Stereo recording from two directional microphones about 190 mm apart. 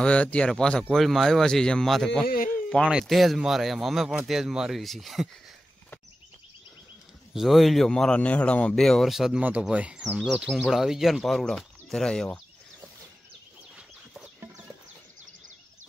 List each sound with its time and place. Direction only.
0.0 s speech: 5° left (ahead or behind)
2.2 s speech: 50° left (ahead or behind)
2.5 s a sound: 5° left (ahead or behind)
2.9 s speech: centre (ahead or behind)
7.3 s speech: centre (ahead or behind)
13.7 s horse: centre (ahead or behind)